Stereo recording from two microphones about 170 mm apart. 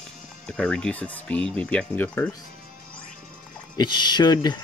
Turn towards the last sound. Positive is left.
turn(degrees=25)  # may be behind; listen again after turning